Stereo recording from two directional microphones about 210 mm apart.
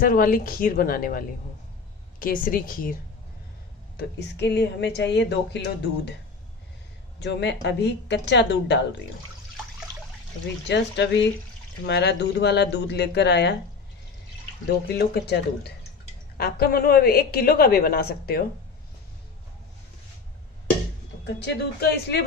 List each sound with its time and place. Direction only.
0.0 s a woman's voice: 45° left (ahead or behind)
3.9 s speech: 55° left (ahead or behind)
7.2 s speech: 55° left (ahead or behind)
10.7 s a woman's voice: 55° left (ahead or behind)
14.7 s a woman's voice: 50° left (ahead or behind)
21.2 s a woman's voice: 55° left (ahead or behind)